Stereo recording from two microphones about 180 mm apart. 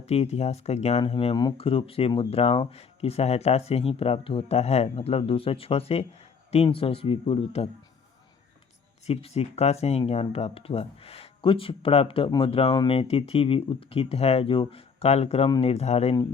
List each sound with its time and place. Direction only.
0.0 s speech: 35° left (ahead or behind)
9.0 s speech: 35° left (ahead or behind)
15.4 s speech: 25° left (ahead or behind)
15.7 s speech: 35° left (ahead or behind)